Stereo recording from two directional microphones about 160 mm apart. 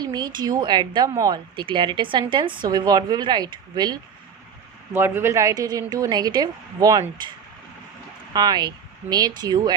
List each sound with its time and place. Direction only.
0.0 s a woman's voice: 25° right (ahead or behind)
4.9 s a woman's voice: 15° right (ahead or behind)
8.3 s speech: 25° right (ahead or behind)